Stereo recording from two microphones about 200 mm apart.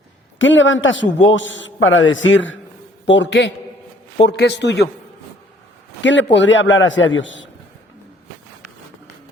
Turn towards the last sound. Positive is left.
turn(degrees=70)  # may be behind; listen again after turning